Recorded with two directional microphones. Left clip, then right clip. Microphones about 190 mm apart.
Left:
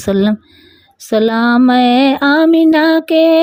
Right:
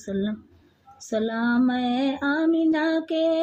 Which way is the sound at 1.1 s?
55° left (ahead or behind).